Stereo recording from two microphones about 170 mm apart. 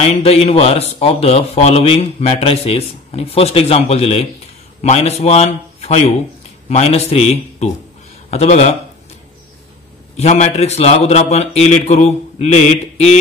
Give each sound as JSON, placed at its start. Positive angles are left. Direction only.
{"t": 0.0, "sound": "speech", "side_deg": 35}
{"t": 10.1, "sound": "speech", "side_deg": 40}